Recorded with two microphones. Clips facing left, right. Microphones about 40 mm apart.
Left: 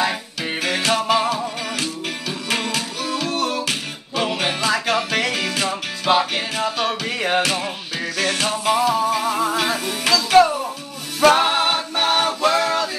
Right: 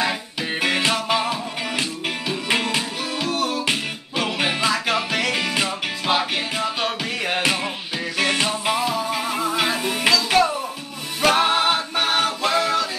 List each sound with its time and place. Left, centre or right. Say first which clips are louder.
0.4 s music: right 2 dB; centre
3.3 s music: right 2 dB; centre
5.3 s music: even; centre
5.7 s music: left 3 dB; centre
6.9 s music: left 3 dB; centre
7.4 s music: right 1 dB; centre
10.1 s music: left 7 dB; centre